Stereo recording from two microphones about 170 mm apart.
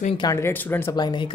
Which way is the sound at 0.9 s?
25° left (ahead or behind).